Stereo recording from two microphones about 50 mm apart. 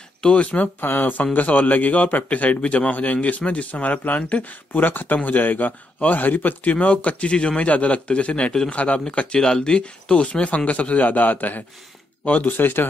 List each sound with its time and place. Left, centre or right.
0.2 s speech: left
0.7 s a man's voice: left